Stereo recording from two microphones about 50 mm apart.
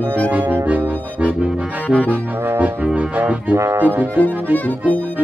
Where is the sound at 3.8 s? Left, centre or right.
Right.